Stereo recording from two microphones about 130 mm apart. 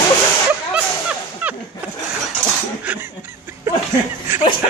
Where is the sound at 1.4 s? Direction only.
10° right (ahead or behind).